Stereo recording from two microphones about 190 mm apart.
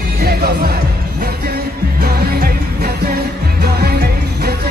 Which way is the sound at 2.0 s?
55° right (ahead or behind).